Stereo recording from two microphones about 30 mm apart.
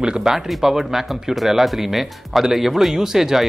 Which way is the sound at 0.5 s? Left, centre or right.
Centre.